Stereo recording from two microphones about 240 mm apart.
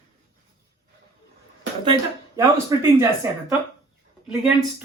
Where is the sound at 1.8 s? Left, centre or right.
Centre.